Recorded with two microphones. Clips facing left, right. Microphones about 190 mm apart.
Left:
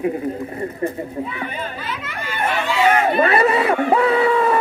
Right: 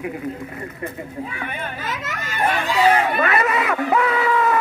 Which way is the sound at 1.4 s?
55° right (ahead or behind).